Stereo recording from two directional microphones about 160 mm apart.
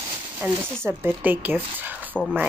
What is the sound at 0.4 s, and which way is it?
Speech, 15° right (ahead or behind).